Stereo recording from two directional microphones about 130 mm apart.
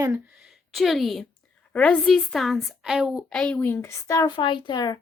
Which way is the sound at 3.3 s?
5° left (ahead or behind).